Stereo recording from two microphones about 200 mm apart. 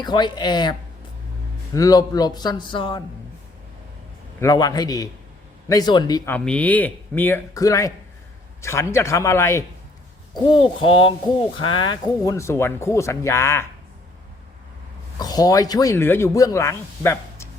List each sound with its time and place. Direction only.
0.0 s speech: 20° left (ahead or behind)
4.4 s speech: 20° left (ahead or behind)
6.3 s speech: 5° left (ahead or behind)
10.4 s speech: 25° left (ahead or behind)
15.2 s speech: 20° left (ahead or behind)